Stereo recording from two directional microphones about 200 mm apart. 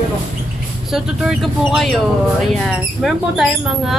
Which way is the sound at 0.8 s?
5° right (ahead or behind).